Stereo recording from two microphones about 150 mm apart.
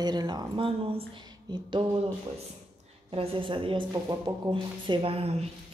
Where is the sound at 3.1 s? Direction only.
40° right (ahead or behind).